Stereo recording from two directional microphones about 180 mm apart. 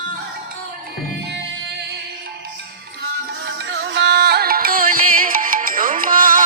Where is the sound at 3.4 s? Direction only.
90° right.